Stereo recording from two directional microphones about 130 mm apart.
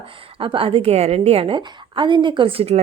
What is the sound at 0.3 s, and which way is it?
A woman's voice, 45° right (ahead or behind).